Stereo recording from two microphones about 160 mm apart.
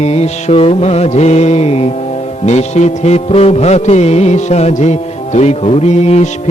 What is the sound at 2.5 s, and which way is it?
Music, 45° left (ahead or behind).